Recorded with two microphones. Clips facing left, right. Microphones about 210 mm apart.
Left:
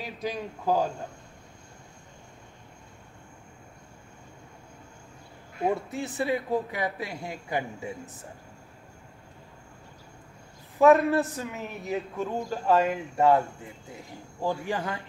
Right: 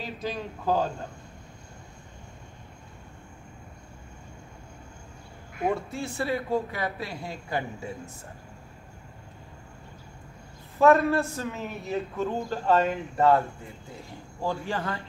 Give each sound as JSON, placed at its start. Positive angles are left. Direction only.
{"t": 0.0, "sound": "a man's voice", "side_deg": 15}
{"t": 5.7, "sound": "a man's voice", "side_deg": 20}
{"t": 10.8, "sound": "a man's voice", "side_deg": 15}
{"t": 14.4, "sound": "a man's voice", "side_deg": 15}